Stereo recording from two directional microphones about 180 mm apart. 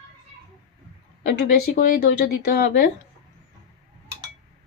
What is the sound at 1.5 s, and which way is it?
Speech, 55° left (ahead or behind).